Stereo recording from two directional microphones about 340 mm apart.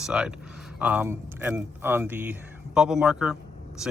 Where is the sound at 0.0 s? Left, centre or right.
Centre.